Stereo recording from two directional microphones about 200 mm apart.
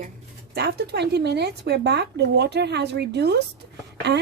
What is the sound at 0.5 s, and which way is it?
Speech, 55° right (ahead or behind).